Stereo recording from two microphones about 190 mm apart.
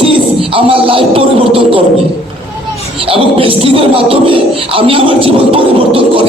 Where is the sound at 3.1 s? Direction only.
30° right (ahead or behind).